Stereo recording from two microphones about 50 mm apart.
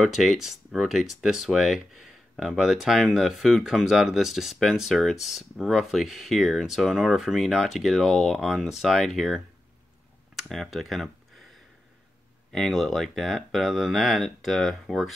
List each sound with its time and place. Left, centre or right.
0.0 s speech: centre
10.5 s speech: centre
12.5 s speech: centre